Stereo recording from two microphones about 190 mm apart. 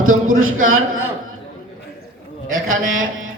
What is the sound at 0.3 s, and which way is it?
Speech, 90° right.